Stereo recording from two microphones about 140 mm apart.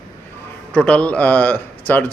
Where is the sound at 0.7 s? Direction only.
5° left (ahead or behind).